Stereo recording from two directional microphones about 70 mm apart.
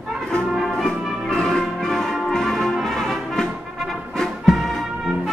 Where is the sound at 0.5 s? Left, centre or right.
Centre.